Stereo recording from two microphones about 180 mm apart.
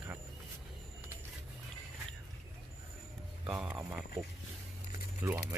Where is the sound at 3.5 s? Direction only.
5° right (ahead or behind).